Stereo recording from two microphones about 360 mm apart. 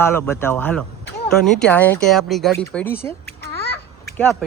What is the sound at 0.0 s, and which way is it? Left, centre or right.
Speech, centre.